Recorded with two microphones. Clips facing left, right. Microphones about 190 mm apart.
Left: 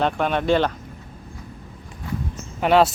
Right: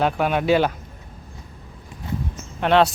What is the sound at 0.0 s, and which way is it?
Speech, 5° right (ahead or behind).